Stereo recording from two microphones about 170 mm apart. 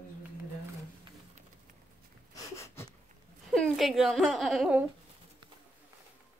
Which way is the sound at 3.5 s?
Centre (ahead or behind).